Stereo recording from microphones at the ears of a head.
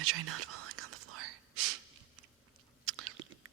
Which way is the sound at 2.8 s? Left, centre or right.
Right.